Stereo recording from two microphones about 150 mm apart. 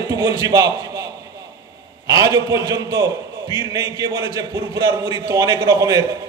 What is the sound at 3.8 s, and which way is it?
Speech, 20° right (ahead or behind).